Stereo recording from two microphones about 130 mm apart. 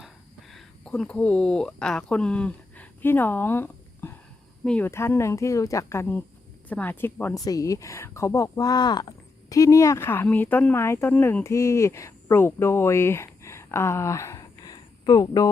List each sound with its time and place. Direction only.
0.0 s a sound: centre (ahead or behind); by 4.1 s 15° left (ahead or behind)
4.6 s speech: 10° left (ahead or behind)
4.9 s speech: 20° left (ahead or behind)
7.3 s speech: 25° left (ahead or behind)